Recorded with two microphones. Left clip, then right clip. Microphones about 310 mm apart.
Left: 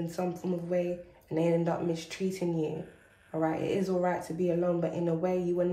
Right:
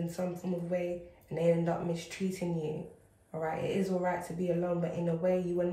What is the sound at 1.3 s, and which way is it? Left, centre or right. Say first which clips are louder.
Speech: left 1 dB; left.